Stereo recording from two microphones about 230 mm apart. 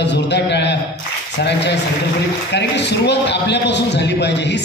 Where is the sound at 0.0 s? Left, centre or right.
Left.